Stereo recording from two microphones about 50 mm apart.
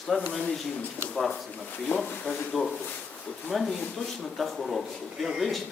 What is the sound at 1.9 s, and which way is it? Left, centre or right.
Speech, left.